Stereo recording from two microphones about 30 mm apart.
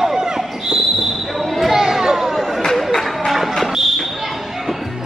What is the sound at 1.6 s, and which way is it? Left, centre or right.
Chatter, centre.